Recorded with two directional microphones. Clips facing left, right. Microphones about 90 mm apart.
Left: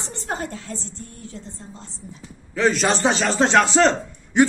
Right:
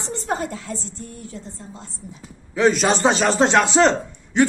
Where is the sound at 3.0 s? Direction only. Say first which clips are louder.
Right 2 dB; 30° right (ahead or behind).